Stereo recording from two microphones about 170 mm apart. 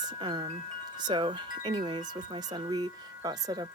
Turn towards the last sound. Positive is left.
turn(degrees=-25)  # may be behind; listen again after turning